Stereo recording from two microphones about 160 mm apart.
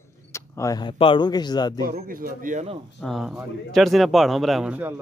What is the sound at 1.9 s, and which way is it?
Speech, 65° right (ahead or behind).